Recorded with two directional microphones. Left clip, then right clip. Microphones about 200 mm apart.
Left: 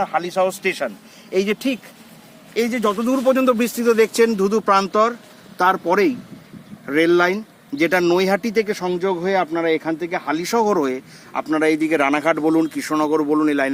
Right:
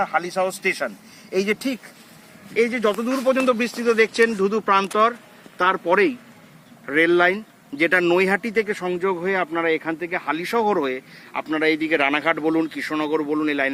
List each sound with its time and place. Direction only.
0.0 s a man's voice: 5° left (ahead or behind)
1.5 s speech: 25° left (ahead or behind)
2.6 s speech: 70° left (ahead or behind)